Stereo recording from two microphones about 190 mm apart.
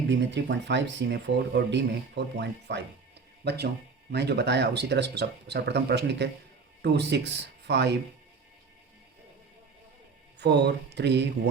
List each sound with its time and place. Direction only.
0.1 s speech: 65° right (ahead or behind)
10.4 s speech: 60° right (ahead or behind)